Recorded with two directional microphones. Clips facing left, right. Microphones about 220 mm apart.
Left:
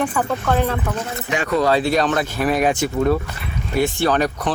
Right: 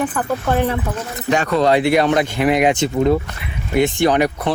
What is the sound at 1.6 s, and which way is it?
Speech, 15° right (ahead or behind).